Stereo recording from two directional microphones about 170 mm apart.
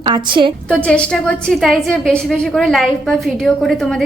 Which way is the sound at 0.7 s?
5° left (ahead or behind).